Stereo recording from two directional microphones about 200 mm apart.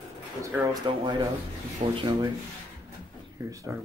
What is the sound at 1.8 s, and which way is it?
Speech, 35° right (ahead or behind).